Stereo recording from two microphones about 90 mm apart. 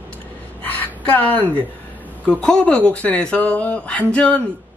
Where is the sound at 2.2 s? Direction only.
10° left (ahead or behind).